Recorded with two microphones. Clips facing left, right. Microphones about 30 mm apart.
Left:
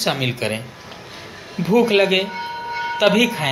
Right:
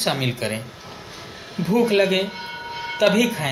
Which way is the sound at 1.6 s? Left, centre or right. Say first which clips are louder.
Left 3 dB; left.